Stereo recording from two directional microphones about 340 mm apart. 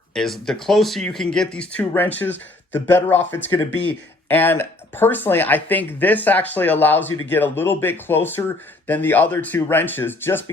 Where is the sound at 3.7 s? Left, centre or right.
Left.